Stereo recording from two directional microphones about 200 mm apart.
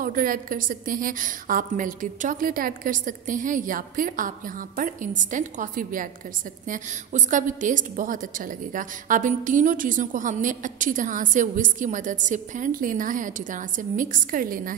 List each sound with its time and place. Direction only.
0.0 s a woman's voice: 45° right (ahead or behind)